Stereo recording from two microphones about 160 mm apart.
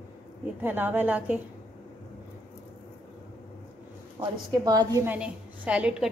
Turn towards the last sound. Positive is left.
turn(degrees=-5)  # may be behind; listen again after turning